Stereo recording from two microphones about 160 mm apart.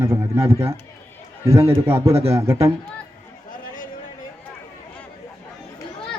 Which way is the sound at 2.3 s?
20° right (ahead or behind).